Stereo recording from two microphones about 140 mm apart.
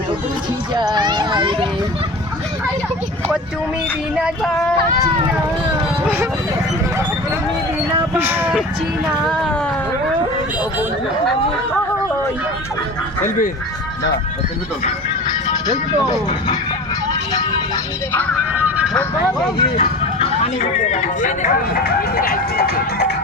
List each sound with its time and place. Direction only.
0.7 s a sound: 30° right (ahead or behind)
8.1 s speech: 15° right (ahead or behind)
9.3 s speech: 5° left (ahead or behind)
19.7 s vehicle: 45° left (ahead or behind)
20.8 s speech: 60° left (ahead or behind); by 23.0 s 90° left